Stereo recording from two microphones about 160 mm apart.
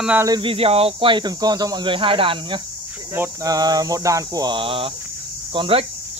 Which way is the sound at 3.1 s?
20° right (ahead or behind).